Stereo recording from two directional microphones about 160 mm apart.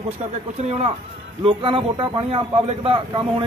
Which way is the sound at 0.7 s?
40° right (ahead or behind).